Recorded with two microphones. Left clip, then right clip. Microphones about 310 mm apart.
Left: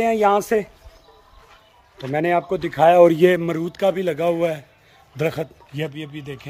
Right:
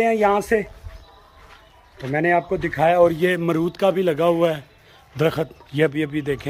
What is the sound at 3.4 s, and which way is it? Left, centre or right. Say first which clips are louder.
Speech: right 1 dB; centre.